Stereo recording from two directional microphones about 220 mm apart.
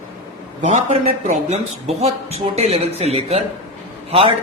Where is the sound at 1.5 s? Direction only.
30° right (ahead or behind).